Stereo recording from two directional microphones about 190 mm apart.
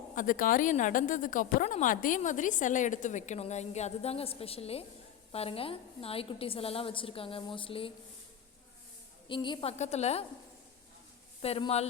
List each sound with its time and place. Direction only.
0.2 s a woman's voice: 45° left (ahead or behind); by 7.9 s 30° left (ahead or behind)
9.3 s speech: 25° left (ahead or behind)
11.4 s speech: 30° left (ahead or behind)